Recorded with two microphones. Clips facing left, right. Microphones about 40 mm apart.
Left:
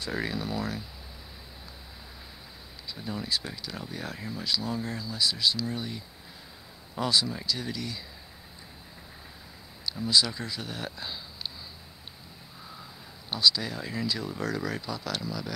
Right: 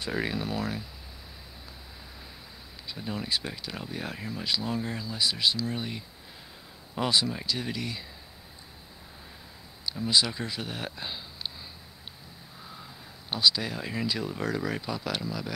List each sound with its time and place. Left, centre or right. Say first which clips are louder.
0.4 s speech: right 1 dB; right
2.9 s speech: right 1 dB; centre
10.0 s speech: even; centre
13.3 s speech: even; centre